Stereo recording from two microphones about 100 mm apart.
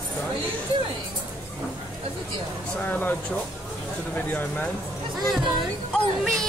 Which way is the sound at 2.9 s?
15° left (ahead or behind).